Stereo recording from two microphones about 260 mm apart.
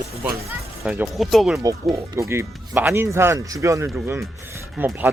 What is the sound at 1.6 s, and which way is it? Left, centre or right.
Speech, centre.